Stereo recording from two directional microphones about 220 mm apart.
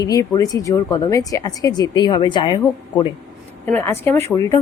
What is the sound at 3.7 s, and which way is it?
Speech, 10° left (ahead or behind).